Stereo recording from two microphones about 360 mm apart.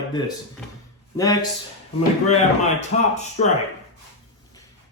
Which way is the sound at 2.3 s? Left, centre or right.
Centre.